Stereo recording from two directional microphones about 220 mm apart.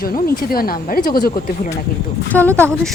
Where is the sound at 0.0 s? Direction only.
45° left (ahead or behind).